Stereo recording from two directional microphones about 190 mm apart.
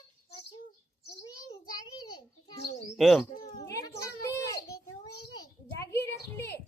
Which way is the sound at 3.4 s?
20° left (ahead or behind).